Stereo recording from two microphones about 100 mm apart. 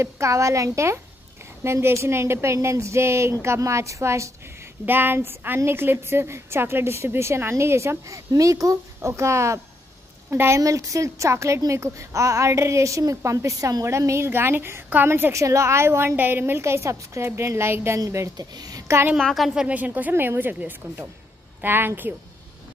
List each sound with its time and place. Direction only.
0.0 s a woman's voice: 30° right (ahead or behind)
19.1 s a woman's voice: centre (ahead or behind); by 22.1 s 20° right (ahead or behind)